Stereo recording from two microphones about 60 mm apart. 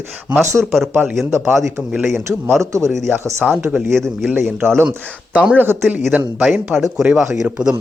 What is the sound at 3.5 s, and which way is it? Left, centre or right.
Speech, centre.